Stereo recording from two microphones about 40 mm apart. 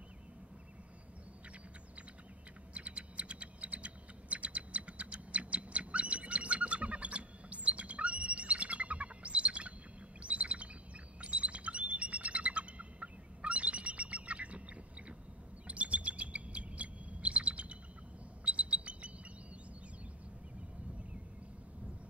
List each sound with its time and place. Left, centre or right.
2.7 s typing: right
10.2 s bird: right
15.6 s chirp: right
18.4 s bird: right